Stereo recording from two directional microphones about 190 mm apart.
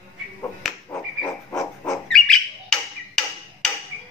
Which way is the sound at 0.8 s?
15° left (ahead or behind).